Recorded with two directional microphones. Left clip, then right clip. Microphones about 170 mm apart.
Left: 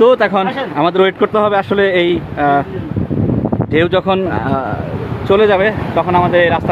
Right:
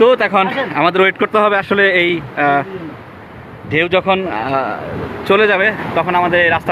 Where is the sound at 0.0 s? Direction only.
25° left (ahead or behind).